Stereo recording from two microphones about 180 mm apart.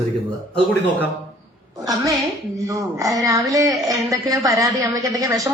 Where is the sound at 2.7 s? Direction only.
20° right (ahead or behind).